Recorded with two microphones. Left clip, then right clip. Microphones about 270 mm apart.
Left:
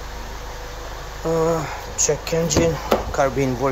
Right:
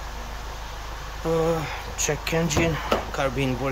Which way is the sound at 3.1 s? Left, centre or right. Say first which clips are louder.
Left 6 dB; centre.